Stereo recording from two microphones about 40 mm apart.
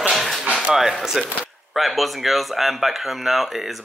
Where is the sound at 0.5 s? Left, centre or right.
Right.